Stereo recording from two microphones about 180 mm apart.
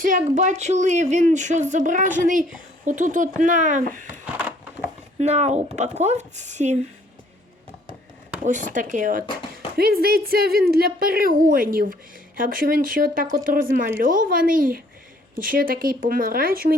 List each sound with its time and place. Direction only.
0.0 s speech: 45° right (ahead or behind)
4.3 s a sound: 10° right (ahead or behind)
5.2 s speech: 40° right (ahead or behind)
8.4 s speech: 45° right (ahead or behind)
9.7 s a woman's voice: 55° right (ahead or behind)